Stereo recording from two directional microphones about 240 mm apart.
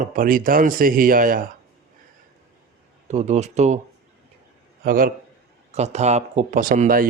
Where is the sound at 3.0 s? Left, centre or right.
Right.